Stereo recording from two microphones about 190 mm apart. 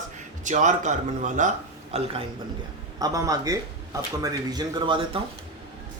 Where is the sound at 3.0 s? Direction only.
20° right (ahead or behind).